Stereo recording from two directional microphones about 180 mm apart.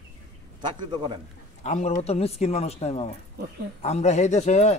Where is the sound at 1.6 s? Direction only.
40° left (ahead or behind).